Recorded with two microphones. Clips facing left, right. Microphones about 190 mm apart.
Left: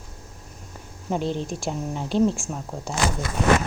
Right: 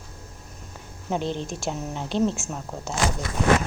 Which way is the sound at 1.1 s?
5° left (ahead or behind).